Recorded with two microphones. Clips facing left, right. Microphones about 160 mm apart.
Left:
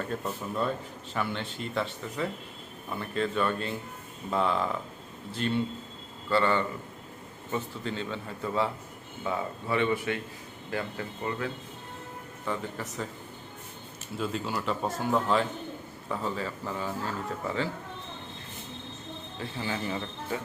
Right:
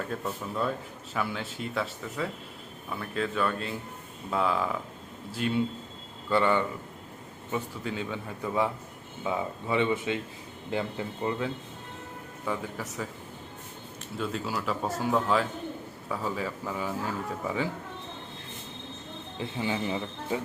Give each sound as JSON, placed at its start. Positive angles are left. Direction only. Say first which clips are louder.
{"t": 1.1, "sound": "a man's voice", "louder": "even", "side_deg": -5}
{"t": 12.5, "sound": "speech", "louder": "right 1 dB", "side_deg": -10}
{"t": 14.2, "sound": "speech", "louder": "even", "side_deg": 0}
{"t": 19.4, "sound": "speech", "louder": "right 3 dB", "side_deg": -20}